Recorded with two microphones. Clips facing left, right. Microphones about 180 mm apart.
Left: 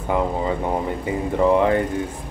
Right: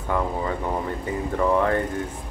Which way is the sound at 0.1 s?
20° left (ahead or behind).